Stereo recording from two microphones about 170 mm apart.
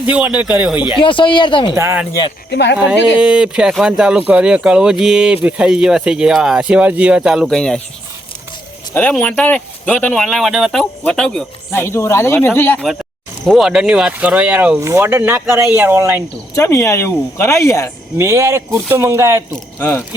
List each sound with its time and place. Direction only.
0.0 s speech: 10° right (ahead or behind)
0.9 s speech: 30° left (ahead or behind)
1.7 s speech: 15° right (ahead or behind)
2.5 s speech: 90° left
3.2 s speech: 5° right (ahead or behind)
8.9 s speech: 10° left (ahead or behind)
11.7 s speech: 15° left (ahead or behind)
13.4 s speech: centre (ahead or behind)
16.6 s speech: 15° left (ahead or behind)
18.2 s speech: 15° right (ahead or behind)
19.8 s speech: 10° left (ahead or behind)